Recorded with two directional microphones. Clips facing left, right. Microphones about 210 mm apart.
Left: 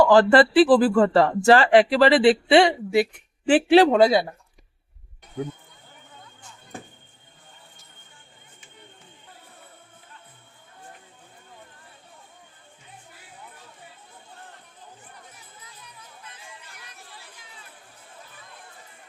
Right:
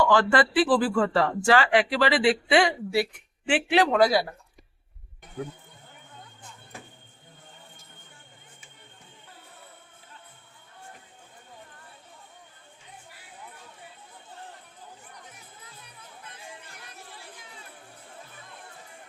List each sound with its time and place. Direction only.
0.0 s speech: 35° left (ahead or behind)
3.4 s speech: 35° left (ahead or behind)